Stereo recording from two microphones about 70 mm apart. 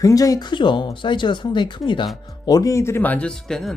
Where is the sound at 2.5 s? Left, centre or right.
Left.